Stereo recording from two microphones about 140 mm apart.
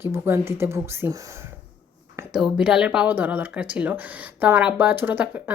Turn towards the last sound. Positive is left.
turn(degrees=-15)  # may be behind; listen again after turning